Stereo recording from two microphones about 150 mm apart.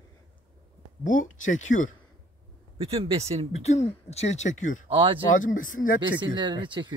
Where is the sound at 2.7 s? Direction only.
40° right (ahead or behind).